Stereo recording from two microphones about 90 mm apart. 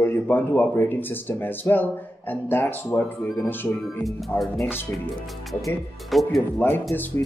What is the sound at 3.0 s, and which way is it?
Speech, 10° left (ahead or behind).